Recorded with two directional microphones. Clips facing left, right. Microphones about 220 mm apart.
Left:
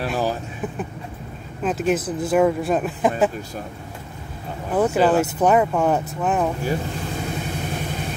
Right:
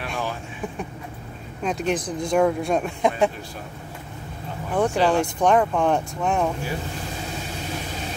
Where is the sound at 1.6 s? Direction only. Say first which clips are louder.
Left 3 dB; 5° left (ahead or behind).